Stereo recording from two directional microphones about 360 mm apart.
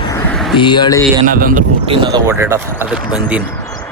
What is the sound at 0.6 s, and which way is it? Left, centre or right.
Speech, centre.